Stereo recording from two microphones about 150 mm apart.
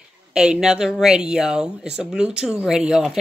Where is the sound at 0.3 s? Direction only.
5° right (ahead or behind).